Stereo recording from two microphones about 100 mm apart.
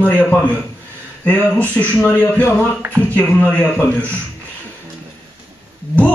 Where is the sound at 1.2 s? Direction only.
15° left (ahead or behind).